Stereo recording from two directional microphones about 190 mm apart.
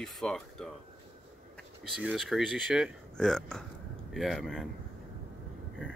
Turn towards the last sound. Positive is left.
turn(degrees=0)  # may be behind; listen again after turning